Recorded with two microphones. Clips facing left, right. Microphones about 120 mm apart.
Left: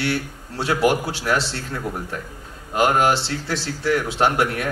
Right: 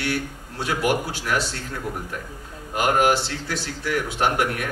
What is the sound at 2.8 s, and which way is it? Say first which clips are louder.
A man's voice: left 2 dB; 30° left (ahead or behind).